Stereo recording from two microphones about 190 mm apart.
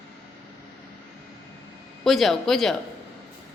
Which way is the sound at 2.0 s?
Centre (ahead or behind).